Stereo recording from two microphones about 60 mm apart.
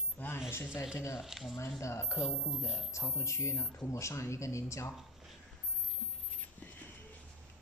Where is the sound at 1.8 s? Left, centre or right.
Left.